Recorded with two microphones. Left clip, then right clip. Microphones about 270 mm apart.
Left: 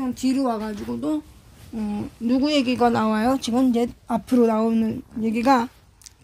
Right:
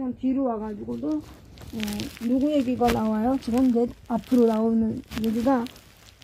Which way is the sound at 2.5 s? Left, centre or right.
Left.